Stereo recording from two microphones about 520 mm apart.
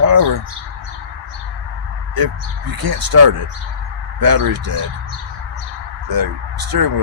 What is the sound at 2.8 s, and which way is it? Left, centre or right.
Speech, right.